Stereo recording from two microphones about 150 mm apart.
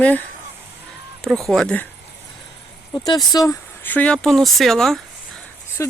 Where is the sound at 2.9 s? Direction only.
25° left (ahead or behind).